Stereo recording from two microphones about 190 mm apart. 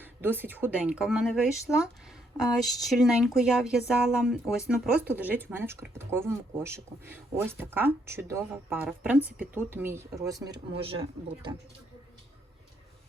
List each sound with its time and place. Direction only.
0.0 s speech: 10° right (ahead or behind)